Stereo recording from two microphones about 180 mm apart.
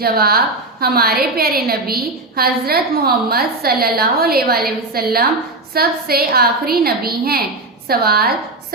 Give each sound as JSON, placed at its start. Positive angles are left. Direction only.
{"t": 0.0, "sound": "a woman's voice", "side_deg": -60}